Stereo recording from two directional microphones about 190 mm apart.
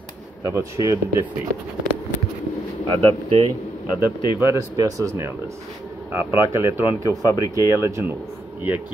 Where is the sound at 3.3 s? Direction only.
25° right (ahead or behind).